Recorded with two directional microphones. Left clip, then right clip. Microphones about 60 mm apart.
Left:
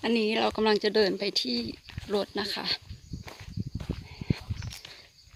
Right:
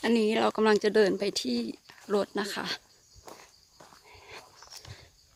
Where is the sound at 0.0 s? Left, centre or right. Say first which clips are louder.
Right 1 dB; right.